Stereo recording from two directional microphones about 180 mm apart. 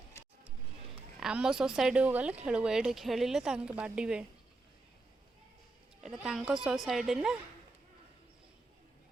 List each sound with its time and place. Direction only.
0.1 s a sound: 15° left (ahead or behind)
1.2 s speech: 5° right (ahead or behind)
6.0 s speech: centre (ahead or behind)